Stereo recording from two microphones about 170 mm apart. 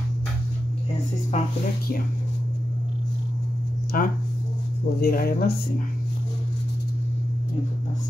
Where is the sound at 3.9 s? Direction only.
55° left (ahead or behind).